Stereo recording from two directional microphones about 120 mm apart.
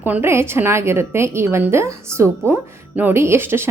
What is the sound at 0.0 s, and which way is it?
A woman's voice, 15° right (ahead or behind).